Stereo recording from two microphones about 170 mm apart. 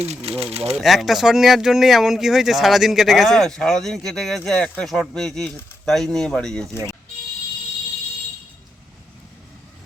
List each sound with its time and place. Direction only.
0.0 s speech: 40° right (ahead or behind)
0.8 s speech: centre (ahead or behind)